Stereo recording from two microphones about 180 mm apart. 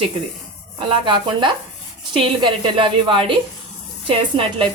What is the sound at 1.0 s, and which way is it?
A woman's voice, 25° right (ahead or behind).